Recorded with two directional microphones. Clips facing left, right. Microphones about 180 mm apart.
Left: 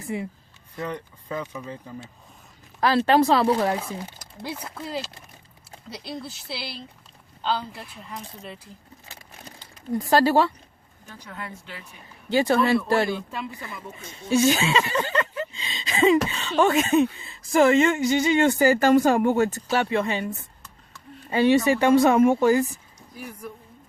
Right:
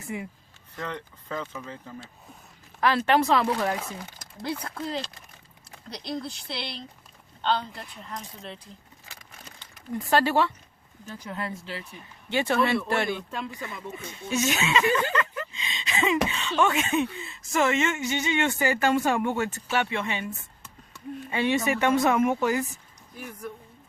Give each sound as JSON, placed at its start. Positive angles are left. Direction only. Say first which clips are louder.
{"t": 0.0, "sound": "speech", "louder": "left 4 dB", "side_deg": 30}
{"t": 0.8, "sound": "speech", "louder": "left 3 dB", "side_deg": 10}
{"t": 2.8, "sound": "speech", "louder": "left 4 dB", "side_deg": 35}
{"t": 4.6, "sound": "speech", "louder": "even", "side_deg": 5}
{"t": 9.0, "sound": "a sound", "louder": "left 3 dB", "side_deg": 35}
{"t": 11.3, "sound": "speech", "louder": "right 3 dB", "side_deg": -30}
{"t": 12.3, "sound": "speech", "louder": "left 4 dB", "side_deg": 35}
{"t": 14.3, "sound": "speech", "louder": "left 6 dB", "side_deg": 30}
{"t": 23.1, "sound": "speech", "louder": "left 1 dB", "side_deg": 5}